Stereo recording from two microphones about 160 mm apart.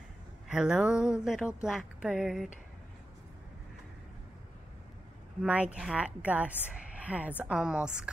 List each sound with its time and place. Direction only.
0.5 s speech: 5° right (ahead or behind)
5.4 s a woman's voice: 10° right (ahead or behind)